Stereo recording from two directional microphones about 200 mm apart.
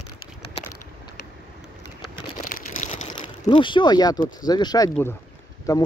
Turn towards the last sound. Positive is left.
turn(degrees=15)  # may be behind; listen again after turning